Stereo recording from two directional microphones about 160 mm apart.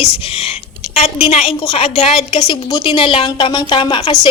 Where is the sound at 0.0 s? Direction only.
35° left (ahead or behind).